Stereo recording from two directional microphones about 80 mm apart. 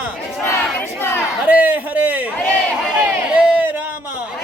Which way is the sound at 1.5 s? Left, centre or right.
Centre.